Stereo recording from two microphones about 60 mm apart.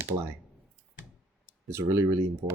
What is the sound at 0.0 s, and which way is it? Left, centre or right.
Speech, right.